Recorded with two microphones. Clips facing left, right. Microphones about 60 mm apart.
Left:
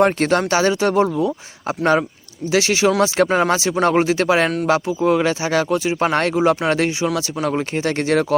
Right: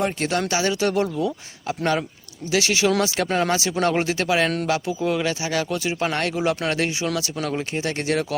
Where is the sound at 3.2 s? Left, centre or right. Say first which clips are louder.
Left 5 dB; centre.